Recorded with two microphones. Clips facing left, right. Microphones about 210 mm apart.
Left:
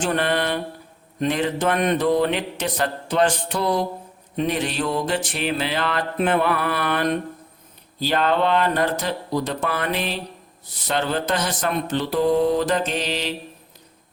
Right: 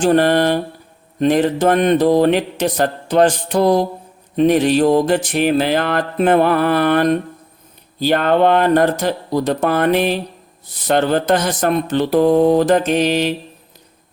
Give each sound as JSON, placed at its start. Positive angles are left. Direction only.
{"t": 0.0, "sound": "mantra", "side_deg": -40}
{"t": 4.4, "sound": "speech", "side_deg": -45}